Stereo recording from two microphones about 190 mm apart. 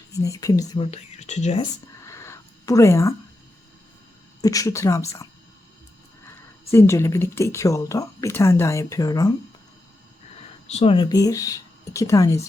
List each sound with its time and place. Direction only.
0.1 s speech: 15° left (ahead or behind)
0.8 s speech: 35° left (ahead or behind)
2.0 s a sound: 15° left (ahead or behind)
4.4 s speech: 20° left (ahead or behind)
10.7 s speech: 30° left (ahead or behind); by 12.4 s 15° left (ahead or behind)